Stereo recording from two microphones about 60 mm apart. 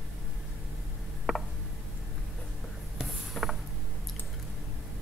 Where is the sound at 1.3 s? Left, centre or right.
Centre.